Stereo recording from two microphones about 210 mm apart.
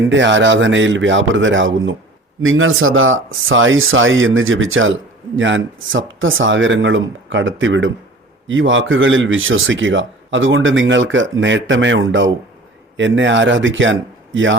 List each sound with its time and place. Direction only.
0.1 s speech: 60° right (ahead or behind)